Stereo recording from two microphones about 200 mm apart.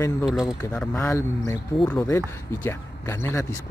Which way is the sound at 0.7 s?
10° left (ahead or behind).